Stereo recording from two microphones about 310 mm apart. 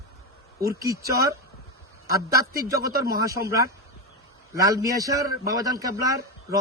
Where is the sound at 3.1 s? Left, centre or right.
Centre.